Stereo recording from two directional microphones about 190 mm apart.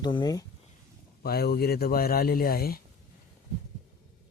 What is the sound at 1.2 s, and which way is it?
Speech, 55° left (ahead or behind).